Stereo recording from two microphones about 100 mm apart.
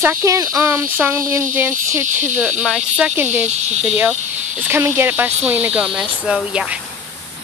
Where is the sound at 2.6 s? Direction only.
5° right (ahead or behind).